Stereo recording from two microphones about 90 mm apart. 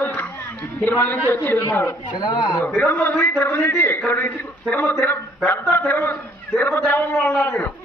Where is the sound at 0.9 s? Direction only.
20° left (ahead or behind).